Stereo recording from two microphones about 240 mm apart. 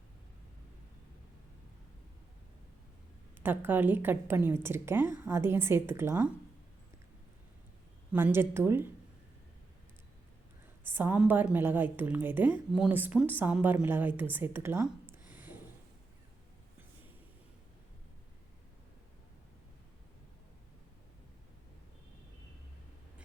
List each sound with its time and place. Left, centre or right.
3.4 s a woman's voice: centre
8.1 s a woman's voice: centre
10.8 s a woman's voice: centre